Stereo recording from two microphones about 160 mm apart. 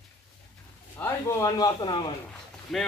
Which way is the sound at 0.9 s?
15° left (ahead or behind).